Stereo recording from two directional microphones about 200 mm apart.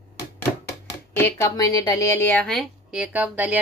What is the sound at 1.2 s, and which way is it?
A woman's voice, 10° left (ahead or behind).